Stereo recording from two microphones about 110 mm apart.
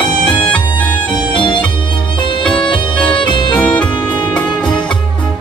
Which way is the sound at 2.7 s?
45° left (ahead or behind).